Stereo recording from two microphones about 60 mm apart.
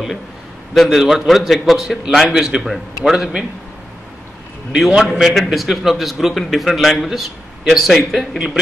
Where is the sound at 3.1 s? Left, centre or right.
Centre.